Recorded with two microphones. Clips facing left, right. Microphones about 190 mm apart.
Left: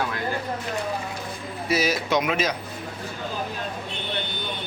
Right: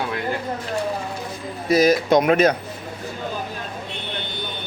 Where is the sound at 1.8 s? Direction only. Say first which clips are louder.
Right 10 dB; 50° right (ahead or behind).